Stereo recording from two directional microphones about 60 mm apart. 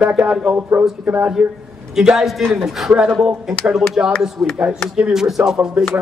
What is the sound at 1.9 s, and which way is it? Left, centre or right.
A man's voice, centre.